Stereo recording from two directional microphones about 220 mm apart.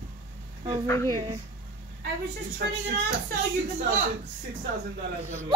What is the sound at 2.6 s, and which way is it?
Speech, 40° right (ahead or behind).